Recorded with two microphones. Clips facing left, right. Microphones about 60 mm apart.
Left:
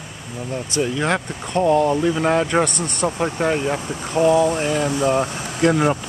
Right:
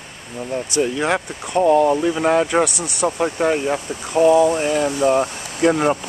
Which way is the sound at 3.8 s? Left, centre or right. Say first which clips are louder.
Left 1 dB; left.